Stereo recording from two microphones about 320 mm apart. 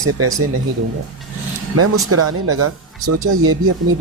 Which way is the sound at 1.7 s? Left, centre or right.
Right.